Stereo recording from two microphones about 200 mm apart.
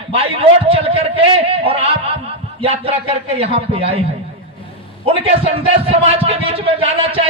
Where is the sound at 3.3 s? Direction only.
30° right (ahead or behind).